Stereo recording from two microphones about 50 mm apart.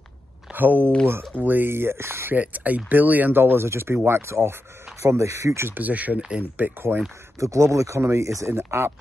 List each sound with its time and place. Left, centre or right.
0.5 s speech: right
2.3 s speech: right
5.0 s speech: right
5.7 s speech: right
7.3 s speech: right
8.0 s speech: right